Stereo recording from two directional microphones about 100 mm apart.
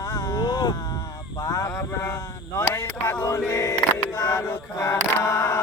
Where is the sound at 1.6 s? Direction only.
30° left (ahead or behind).